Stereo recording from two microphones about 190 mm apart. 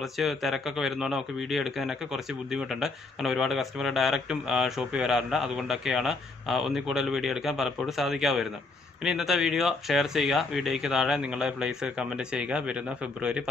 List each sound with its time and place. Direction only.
0.0 s speech: centre (ahead or behind)